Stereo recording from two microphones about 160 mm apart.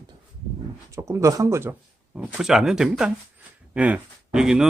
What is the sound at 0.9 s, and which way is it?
Speech, 20° right (ahead or behind).